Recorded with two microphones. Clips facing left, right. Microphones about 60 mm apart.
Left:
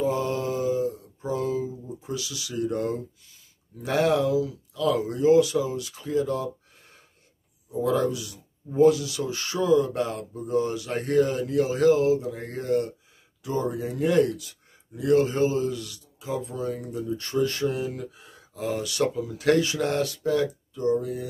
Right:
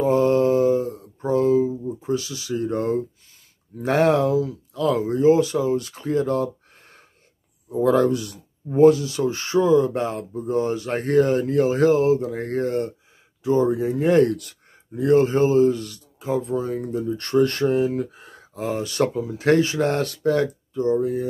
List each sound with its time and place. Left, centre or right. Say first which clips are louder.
0.0 s mantra: right 8 dB; right
3.8 s speech: right 4 dB; right
13.4 s speech: right 8 dB; right
17.2 s speech: right 7 dB; right
17.6 s speech: right 8 dB; right
20.7 s speech: right 5 dB; right